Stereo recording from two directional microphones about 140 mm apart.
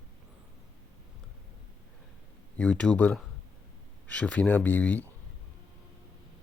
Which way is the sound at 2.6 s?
10° left (ahead or behind).